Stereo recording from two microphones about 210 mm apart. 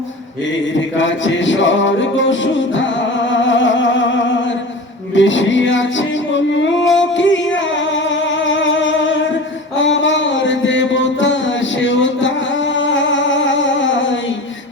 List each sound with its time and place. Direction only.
0.7 s music: 65° left (ahead or behind)